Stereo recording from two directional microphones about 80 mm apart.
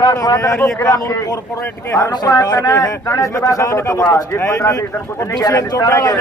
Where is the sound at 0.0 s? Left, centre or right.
Left.